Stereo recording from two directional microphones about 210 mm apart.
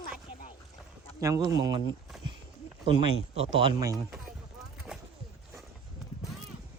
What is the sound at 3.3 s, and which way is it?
Speech, 25° right (ahead or behind).